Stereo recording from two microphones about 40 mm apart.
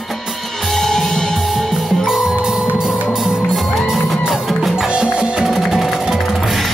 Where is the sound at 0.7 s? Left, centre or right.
Centre.